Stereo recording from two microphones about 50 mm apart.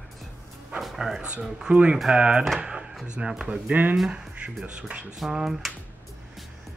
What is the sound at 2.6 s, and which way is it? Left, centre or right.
Drawer open or close, centre.